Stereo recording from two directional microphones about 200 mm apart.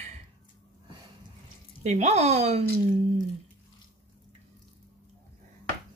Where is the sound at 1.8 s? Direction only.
35° right (ahead or behind).